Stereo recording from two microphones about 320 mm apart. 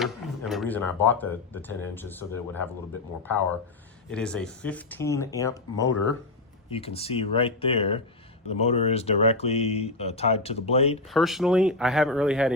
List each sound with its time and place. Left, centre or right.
0.0 s speech: centre
4.1 s speech: centre
11.1 s speech: centre